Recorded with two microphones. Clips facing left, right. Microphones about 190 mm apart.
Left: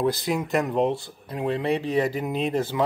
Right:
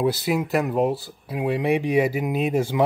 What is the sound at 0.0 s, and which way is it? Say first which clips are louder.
Speech: right 2 dB; 5° right (ahead or behind).